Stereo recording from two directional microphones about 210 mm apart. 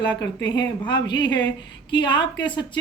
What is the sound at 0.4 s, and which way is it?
Speech, 20° left (ahead or behind).